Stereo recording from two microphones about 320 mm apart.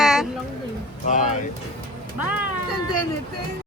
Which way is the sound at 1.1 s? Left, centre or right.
Left.